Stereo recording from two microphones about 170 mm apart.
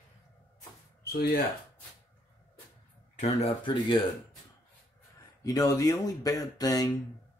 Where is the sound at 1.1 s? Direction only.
65° left (ahead or behind).